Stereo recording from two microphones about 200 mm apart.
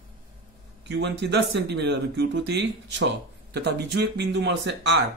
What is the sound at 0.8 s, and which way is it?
Speech, 60° right (ahead or behind).